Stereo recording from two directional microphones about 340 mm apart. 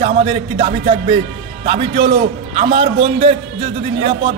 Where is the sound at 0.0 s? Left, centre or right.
Centre.